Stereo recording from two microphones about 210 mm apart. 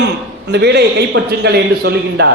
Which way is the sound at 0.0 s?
55° right (ahead or behind).